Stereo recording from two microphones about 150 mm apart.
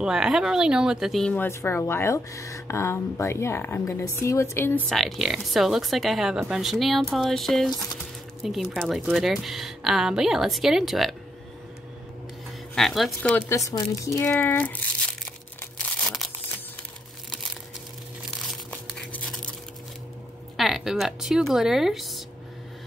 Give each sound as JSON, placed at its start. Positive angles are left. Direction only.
{"t": 0.0, "sound": "speech", "side_deg": -5}
{"t": 1.3, "sound": "speech", "side_deg": 15}
{"t": 4.8, "sound": "speech", "side_deg": 0}
{"t": 12.7, "sound": "speech", "side_deg": 0}
{"t": 13.5, "sound": "speech", "side_deg": 20}
{"t": 15.8, "sound": "crumpling", "side_deg": 0}
{"t": 18.5, "sound": "crumpling", "side_deg": 5}
{"t": 20.5, "sound": "speech", "side_deg": 0}